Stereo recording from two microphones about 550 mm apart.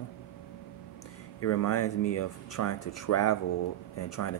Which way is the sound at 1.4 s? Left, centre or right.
Left.